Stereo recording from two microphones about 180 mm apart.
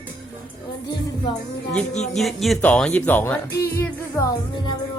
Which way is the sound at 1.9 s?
40° left (ahead or behind).